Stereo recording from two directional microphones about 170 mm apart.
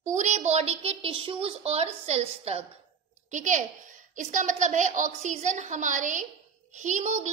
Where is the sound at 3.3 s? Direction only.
50° right (ahead or behind).